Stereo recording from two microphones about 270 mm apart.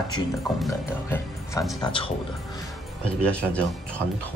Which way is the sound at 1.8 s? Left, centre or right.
Centre.